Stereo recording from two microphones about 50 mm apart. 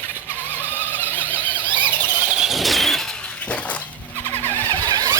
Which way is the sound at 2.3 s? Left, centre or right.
Centre.